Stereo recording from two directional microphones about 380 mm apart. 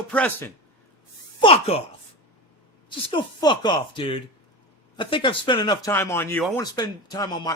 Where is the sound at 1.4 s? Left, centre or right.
Centre.